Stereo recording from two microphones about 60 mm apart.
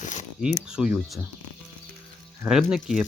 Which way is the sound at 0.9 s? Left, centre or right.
Centre.